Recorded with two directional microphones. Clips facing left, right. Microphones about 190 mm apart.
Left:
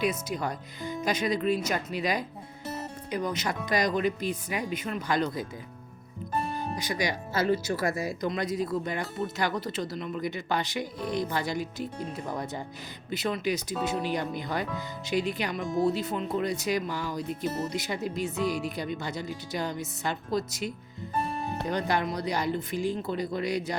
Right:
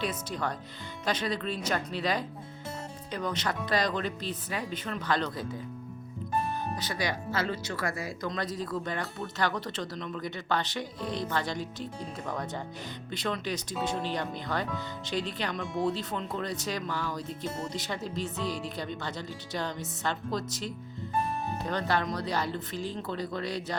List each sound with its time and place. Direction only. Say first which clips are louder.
0.0 s speech: left 3 dB; 10° left (ahead or behind)
6.6 s speech: left 2 dB; 10° left (ahead or behind)